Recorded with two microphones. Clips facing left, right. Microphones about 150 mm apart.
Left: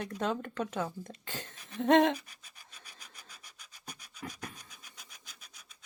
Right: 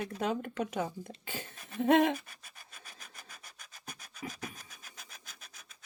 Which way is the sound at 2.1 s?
50° right (ahead or behind).